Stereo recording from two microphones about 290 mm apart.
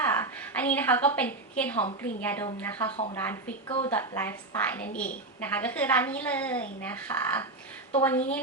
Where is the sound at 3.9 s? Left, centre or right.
Centre.